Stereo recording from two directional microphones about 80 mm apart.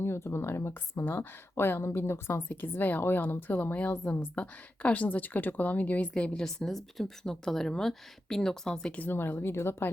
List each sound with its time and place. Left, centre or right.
0.0 s a woman's voice: left